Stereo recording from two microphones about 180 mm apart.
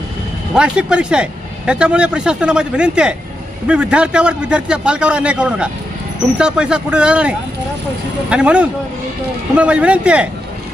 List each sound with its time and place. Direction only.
0.5 s speech: 5° right (ahead or behind)